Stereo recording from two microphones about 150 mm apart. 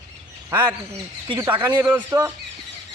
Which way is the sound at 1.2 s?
25° right (ahead or behind).